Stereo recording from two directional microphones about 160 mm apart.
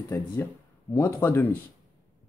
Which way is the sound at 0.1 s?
15° left (ahead or behind).